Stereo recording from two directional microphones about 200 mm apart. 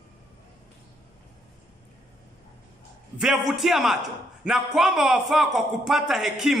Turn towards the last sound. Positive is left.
turn(degrees=0)  # may be behind; listen again after turning